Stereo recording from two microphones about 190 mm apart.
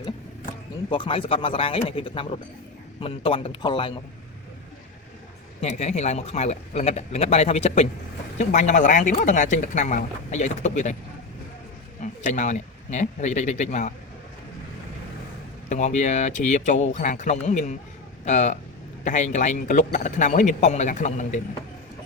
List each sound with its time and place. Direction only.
0.9 s speech: 25° left (ahead or behind)
5.5 s speech: 35° left (ahead or behind)
12.0 s speech: 40° left (ahead or behind)
15.7 s speech: 40° left (ahead or behind)